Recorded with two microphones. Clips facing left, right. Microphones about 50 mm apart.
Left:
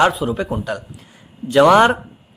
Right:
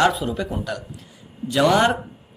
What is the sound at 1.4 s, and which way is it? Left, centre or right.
Speech, left.